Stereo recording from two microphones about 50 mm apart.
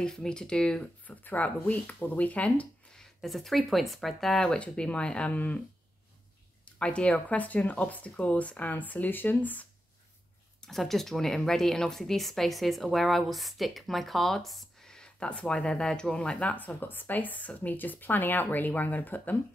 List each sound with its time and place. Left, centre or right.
0.0 s speech: centre
1.0 s speech: left
3.0 s speech: centre
4.6 s speech: left
6.8 s speech: left
10.6 s speech: centre
14.9 s speech: centre; by 19.3 s left